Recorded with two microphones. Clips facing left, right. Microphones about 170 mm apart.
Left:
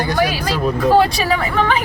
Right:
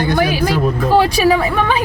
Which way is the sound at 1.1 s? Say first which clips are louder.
Right 5 dB; 10° right (ahead or behind).